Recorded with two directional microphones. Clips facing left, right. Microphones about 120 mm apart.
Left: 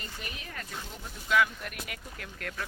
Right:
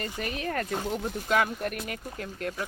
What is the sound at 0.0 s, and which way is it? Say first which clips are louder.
Speech: right 11 dB; 55° right (ahead or behind).